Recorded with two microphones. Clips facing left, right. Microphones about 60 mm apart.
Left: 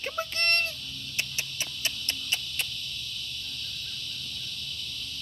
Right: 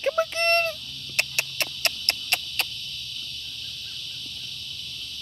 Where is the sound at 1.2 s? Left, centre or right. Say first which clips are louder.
Right 7 dB; right.